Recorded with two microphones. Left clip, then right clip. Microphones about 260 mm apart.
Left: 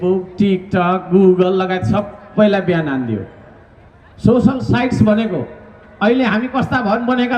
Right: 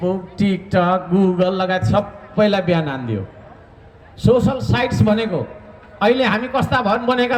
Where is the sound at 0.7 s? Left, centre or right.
Right.